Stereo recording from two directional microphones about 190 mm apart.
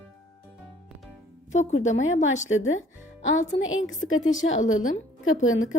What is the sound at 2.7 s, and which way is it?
Music, 40° left (ahead or behind).